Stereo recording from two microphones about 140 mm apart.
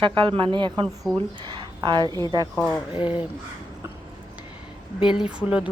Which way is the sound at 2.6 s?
5° left (ahead or behind).